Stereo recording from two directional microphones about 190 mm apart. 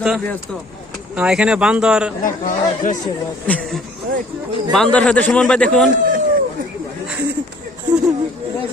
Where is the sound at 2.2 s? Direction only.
45° left (ahead or behind).